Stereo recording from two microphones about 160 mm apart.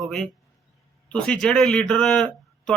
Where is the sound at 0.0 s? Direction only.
5° left (ahead or behind).